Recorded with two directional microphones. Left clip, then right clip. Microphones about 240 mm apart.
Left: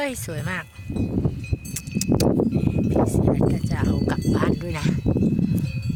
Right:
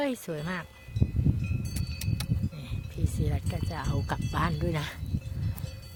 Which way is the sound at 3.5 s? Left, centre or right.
Centre.